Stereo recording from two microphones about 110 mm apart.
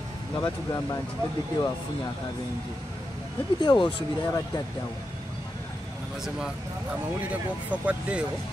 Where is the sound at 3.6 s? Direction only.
45° left (ahead or behind).